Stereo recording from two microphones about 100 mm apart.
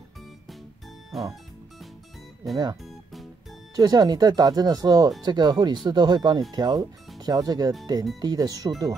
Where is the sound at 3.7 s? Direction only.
40° right (ahead or behind).